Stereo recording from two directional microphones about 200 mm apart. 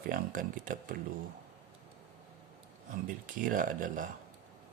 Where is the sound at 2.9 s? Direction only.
45° right (ahead or behind).